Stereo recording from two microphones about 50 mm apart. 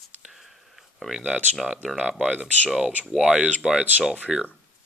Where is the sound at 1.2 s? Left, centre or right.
Right.